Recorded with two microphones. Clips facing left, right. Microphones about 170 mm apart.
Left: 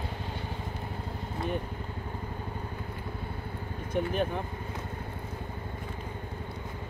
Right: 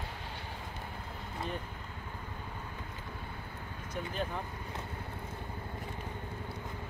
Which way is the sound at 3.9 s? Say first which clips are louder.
Left 8 dB; 60° left (ahead or behind).